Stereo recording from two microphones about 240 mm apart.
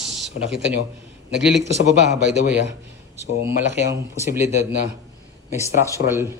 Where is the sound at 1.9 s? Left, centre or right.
Right.